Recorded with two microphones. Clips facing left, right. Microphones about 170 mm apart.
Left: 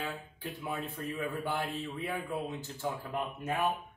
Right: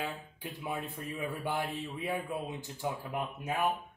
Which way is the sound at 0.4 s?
15° right (ahead or behind).